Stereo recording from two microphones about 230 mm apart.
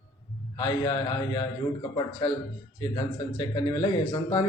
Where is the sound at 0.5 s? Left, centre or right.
Left.